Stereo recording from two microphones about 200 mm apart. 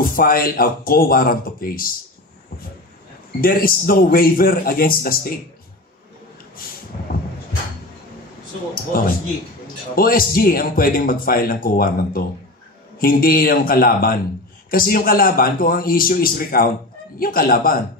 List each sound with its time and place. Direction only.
0.0 s a man's voice: 45° left (ahead or behind)
3.3 s a man's voice: 45° left (ahead or behind)
8.9 s a man's voice: 45° left (ahead or behind)